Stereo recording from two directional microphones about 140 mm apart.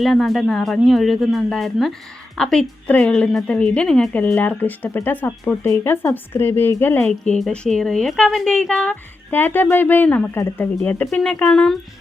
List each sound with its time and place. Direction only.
0.0 s a woman's voice: centre (ahead or behind)